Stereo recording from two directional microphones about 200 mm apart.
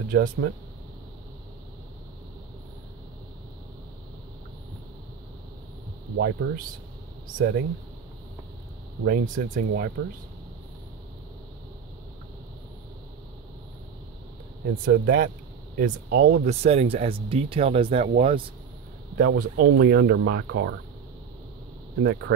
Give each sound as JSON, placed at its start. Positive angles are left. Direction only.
{"t": 0.1, "sound": "speech", "side_deg": -45}
{"t": 6.1, "sound": "speech", "side_deg": -55}
{"t": 9.0, "sound": "speech", "side_deg": -45}
{"t": 14.9, "sound": "speech", "side_deg": -50}
{"t": 16.4, "sound": "speech", "side_deg": -30}
{"t": 19.1, "sound": "speech", "side_deg": -45}